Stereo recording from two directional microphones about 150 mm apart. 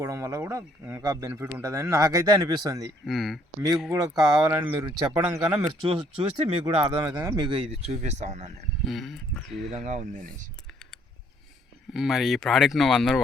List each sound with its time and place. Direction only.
0.0 s speech: 20° right (ahead or behind)
3.1 s speech: centre (ahead or behind)
3.9 s speech: 25° right (ahead or behind)
5.5 s speech: 35° right (ahead or behind)
8.8 s speech: centre (ahead or behind)
9.6 s speech: 50° right (ahead or behind)
10.7 s a sound: centre (ahead or behind)
11.9 s speech: centre (ahead or behind)